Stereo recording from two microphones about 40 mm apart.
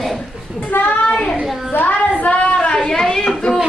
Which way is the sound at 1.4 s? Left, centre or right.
Centre.